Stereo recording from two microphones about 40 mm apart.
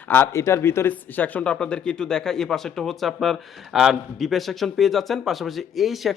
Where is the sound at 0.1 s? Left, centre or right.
Left.